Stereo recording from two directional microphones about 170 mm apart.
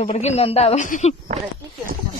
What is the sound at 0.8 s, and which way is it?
Speech, 50° left (ahead or behind).